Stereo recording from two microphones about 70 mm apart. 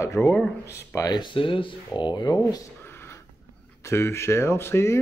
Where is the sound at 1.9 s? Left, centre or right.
Left.